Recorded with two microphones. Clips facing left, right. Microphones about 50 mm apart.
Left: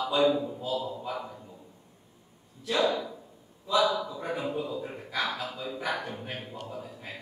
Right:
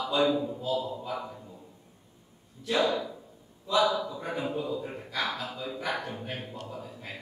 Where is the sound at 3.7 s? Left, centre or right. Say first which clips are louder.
Even; centre.